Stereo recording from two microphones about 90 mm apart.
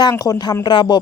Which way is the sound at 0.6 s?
60° left (ahead or behind).